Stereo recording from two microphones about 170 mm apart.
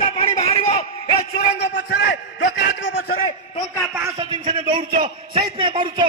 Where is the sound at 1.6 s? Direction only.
85° left.